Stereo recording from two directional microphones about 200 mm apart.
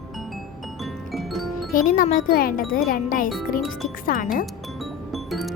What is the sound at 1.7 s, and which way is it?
Speech, 45° left (ahead or behind).